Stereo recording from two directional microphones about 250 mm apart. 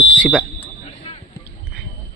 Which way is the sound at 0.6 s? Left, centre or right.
Left.